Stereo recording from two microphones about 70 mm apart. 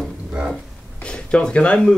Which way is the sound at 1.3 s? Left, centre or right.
Centre.